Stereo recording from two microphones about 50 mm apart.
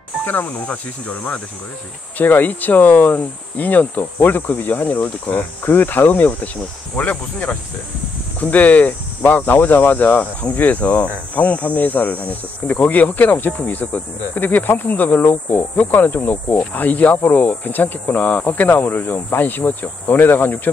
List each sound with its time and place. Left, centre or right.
0.2 s speech: left